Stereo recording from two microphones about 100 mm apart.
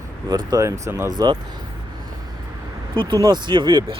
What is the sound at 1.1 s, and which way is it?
Speech, 45° right (ahead or behind).